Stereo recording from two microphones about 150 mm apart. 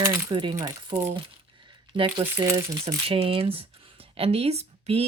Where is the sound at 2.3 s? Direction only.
20° right (ahead or behind).